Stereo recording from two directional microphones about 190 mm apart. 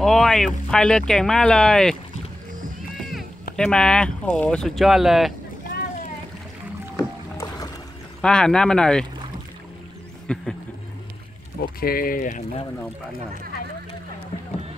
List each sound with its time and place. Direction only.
0.0 s speech: centre (ahead or behind)
3.0 s run: centre (ahead or behind)
3.5 s speech: 5° left (ahead or behind)
7.3 s music: 20° left (ahead or behind)
8.2 s speech: 5° left (ahead or behind)
10.2 s a sound: 5° left (ahead or behind)
11.8 s speech: 50° left (ahead or behind)